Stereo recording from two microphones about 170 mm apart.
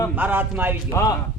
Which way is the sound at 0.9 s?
20° left (ahead or behind).